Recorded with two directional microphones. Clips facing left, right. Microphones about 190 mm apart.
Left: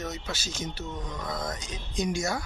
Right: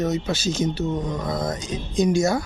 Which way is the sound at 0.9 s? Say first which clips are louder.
Right 9 dB; 35° right (ahead or behind).